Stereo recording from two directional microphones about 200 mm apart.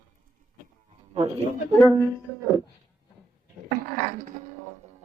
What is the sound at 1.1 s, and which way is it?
Speech, 30° right (ahead or behind).